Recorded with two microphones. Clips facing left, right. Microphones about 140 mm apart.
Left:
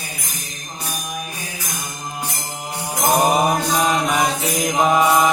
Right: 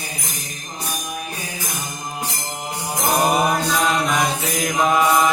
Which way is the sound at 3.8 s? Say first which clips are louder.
Left 1 dB; 10° left (ahead or behind).